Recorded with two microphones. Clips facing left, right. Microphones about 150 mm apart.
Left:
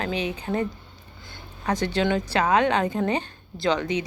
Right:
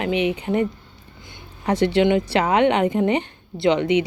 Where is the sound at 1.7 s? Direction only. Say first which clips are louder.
Right 6 dB; 30° right (ahead or behind).